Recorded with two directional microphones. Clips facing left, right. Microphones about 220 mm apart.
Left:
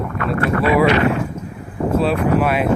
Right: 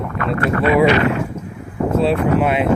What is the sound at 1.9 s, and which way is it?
Speech, 20° right (ahead or behind).